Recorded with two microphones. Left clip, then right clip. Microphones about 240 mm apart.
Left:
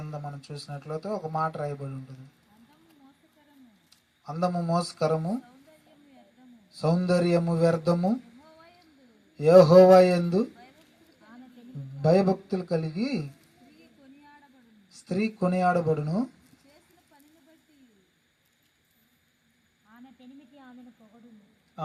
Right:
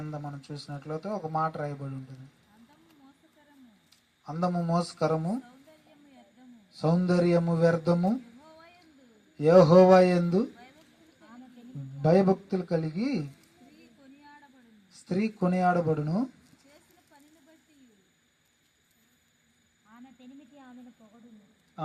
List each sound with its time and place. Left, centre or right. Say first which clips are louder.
0.0 s speech: left 1 dB; left
4.2 s speech: left 2 dB; left
6.7 s speech: left 2 dB; left
9.4 s speech: left 3 dB; left
12.0 s speech: left 1 dB; left
15.0 s speech: left 2 dB; left
19.9 s a sound: even; centre